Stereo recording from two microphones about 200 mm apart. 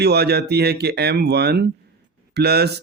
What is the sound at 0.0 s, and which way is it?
Speech, 55° right (ahead or behind).